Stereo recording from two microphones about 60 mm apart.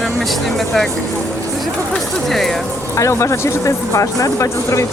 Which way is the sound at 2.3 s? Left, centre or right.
Centre.